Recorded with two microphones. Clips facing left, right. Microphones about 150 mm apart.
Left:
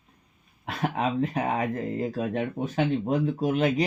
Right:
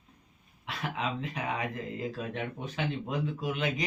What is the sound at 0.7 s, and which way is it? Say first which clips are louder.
Speech: left 7 dB; 50° left (ahead or behind).